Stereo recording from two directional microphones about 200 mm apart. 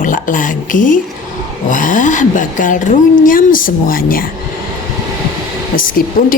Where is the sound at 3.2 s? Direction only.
45° left (ahead or behind).